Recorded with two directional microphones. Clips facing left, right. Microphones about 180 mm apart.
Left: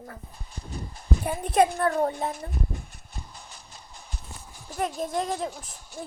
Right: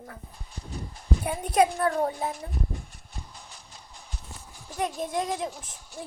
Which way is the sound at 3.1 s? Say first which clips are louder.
Left 1 dB; 45° left (ahead or behind).